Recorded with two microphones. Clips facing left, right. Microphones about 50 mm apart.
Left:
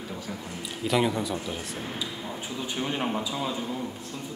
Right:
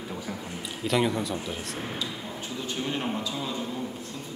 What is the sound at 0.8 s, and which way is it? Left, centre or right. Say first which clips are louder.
Speech: even; centre.